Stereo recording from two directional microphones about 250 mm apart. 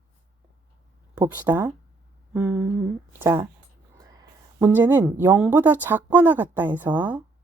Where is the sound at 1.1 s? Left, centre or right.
Centre.